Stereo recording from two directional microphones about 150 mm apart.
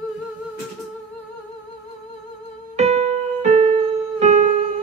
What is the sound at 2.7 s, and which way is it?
Music, 50° right (ahead or behind).